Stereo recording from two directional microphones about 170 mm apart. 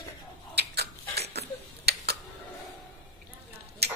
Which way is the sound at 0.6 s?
75° right (ahead or behind).